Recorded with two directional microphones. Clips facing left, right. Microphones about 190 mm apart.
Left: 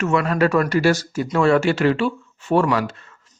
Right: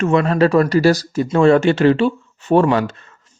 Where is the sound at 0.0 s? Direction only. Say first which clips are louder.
Right 4 dB; 30° right (ahead or behind).